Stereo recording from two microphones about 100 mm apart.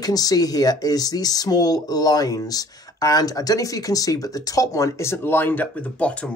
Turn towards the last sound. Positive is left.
turn(degrees=15)  # may be behind; listen again after turning